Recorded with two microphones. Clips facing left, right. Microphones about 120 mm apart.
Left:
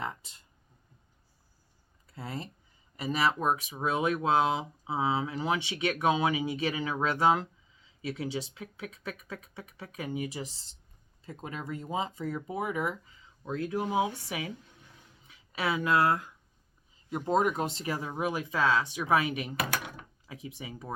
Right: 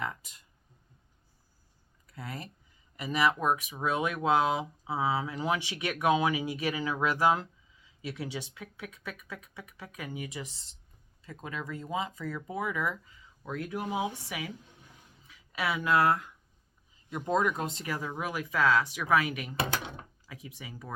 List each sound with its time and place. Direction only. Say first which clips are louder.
0.0 s speech: even; 30° left (ahead or behind)
2.0 s speech: left 2 dB; 30° left (ahead or behind)
19.5 s drawer open or close: right 1 dB; 25° right (ahead or behind)
20.2 s speech: left 7 dB; 30° left (ahead or behind)